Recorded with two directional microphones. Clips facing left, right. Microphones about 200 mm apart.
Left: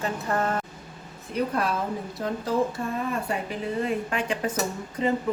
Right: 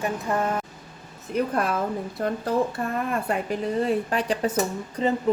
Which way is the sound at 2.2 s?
55° right (ahead or behind).